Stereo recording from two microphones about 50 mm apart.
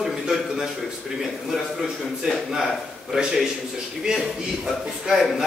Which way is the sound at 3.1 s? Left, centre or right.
Centre.